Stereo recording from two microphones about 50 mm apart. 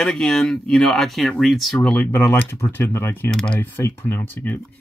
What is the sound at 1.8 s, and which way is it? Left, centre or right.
Speech, left.